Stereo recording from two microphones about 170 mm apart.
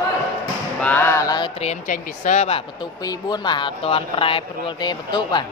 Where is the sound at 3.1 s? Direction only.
25° left (ahead or behind).